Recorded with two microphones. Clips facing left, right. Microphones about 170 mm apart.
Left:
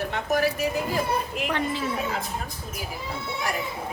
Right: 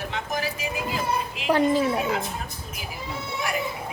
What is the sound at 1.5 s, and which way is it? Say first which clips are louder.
Speech: right 10 dB; 35° right (ahead or behind).